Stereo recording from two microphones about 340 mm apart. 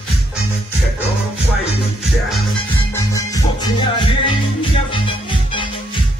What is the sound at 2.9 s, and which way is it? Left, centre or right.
Music, centre.